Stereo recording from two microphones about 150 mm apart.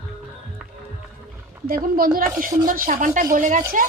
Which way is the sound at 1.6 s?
70° right (ahead or behind).